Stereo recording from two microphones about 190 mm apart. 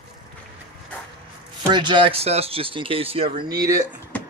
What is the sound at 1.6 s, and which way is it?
Speech, 25° right (ahead or behind).